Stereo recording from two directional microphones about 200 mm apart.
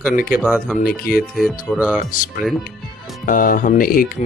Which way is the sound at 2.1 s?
40° left (ahead or behind).